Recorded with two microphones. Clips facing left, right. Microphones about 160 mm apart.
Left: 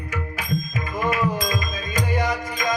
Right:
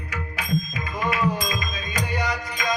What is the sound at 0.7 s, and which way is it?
Music, 45° left (ahead or behind).